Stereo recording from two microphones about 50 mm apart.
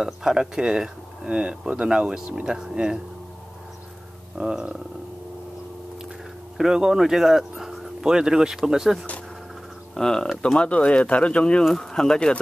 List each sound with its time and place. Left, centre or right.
0.0 s speech: centre
4.4 s speech: centre
6.6 s speech: centre
8.0 s speech: centre
9.9 s speech: centre
10.4 s speech: left